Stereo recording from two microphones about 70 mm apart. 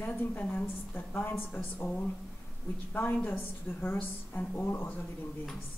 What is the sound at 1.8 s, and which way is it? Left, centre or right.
Speech, left.